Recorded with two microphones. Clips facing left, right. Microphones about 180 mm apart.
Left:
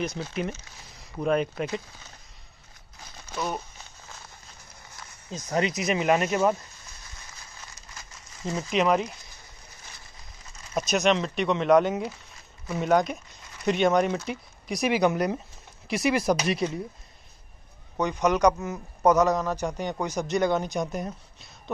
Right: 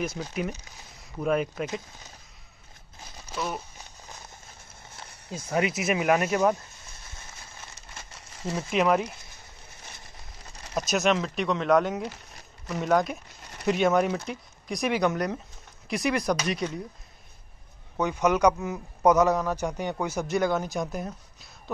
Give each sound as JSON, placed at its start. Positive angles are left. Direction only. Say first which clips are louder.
{"t": 0.0, "sound": "a man's voice", "louder": "left 1 dB", "side_deg": -5}
{"t": 3.3, "sound": "a sound", "louder": "left 1 dB", "side_deg": 0}
{"t": 4.1, "sound": "a sound", "louder": "right 2 dB", "side_deg": -25}
{"t": 5.5, "sound": "a man's voice", "louder": "even", "side_deg": -5}
{"t": 7.7, "sound": "crumpling", "louder": "right 1 dB", "side_deg": -30}
{"t": 8.5, "sound": "speech", "louder": "even", "side_deg": -5}
{"t": 10.9, "sound": "speech", "louder": "left 1 dB", "side_deg": -5}
{"t": 17.9, "sound": "a man's voice", "louder": "even", "side_deg": -10}